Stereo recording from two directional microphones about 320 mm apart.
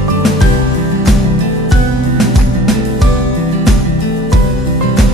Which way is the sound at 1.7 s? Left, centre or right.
Centre.